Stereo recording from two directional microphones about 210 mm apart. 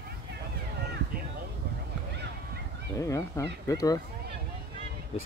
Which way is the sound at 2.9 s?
15° left (ahead or behind).